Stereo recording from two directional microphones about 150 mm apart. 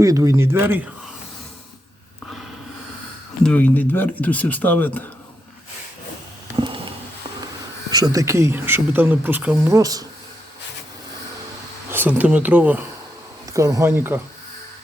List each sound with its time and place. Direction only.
0.0 s speech: 20° right (ahead or behind)
3.4 s speech: 10° left (ahead or behind)
6.6 s a sound: 30° right (ahead or behind)
7.9 s speech: 25° right (ahead or behind)
9.7 s speech: 25° right (ahead or behind)
11.9 s speech: 10° right (ahead or behind)
13.5 s speech: 20° right (ahead or behind)